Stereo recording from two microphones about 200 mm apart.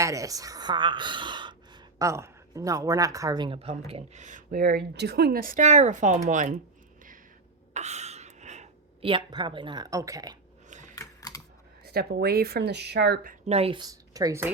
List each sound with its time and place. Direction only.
0.0 s speech: 15° right (ahead or behind); by 6.5 s 35° right (ahead or behind)
7.7 s speech: 35° right (ahead or behind); by 10.3 s 20° right (ahead or behind)
10.9 s typing: 15° left (ahead or behind)
11.9 s speech: 50° right (ahead or behind)
13.5 s speech: 30° right (ahead or behind)